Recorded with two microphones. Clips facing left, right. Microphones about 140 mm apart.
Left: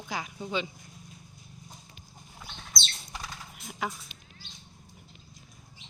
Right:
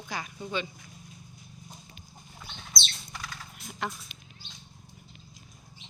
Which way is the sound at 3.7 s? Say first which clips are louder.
Left 1 dB; 5° left (ahead or behind).